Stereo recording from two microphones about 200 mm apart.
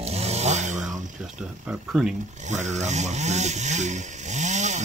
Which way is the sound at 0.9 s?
5° right (ahead or behind).